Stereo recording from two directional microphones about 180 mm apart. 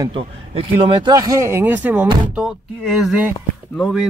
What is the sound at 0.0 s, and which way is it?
Speech, 30° right (ahead or behind).